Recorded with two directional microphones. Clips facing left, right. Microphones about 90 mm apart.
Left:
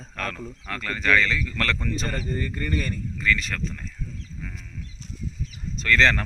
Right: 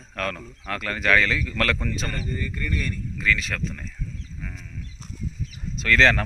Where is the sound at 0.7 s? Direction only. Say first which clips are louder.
Right 1 dB; 10° right (ahead or behind).